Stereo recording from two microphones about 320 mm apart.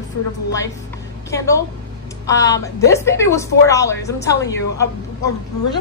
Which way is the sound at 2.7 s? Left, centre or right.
Centre.